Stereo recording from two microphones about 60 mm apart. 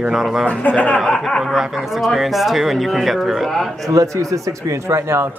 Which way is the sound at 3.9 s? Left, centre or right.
Right.